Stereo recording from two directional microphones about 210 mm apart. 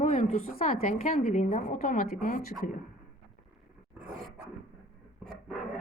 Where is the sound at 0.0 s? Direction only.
35° left (ahead or behind).